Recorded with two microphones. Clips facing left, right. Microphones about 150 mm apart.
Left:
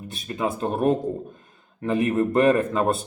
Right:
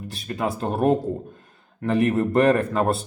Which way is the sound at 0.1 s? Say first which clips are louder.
Even; 20° left (ahead or behind).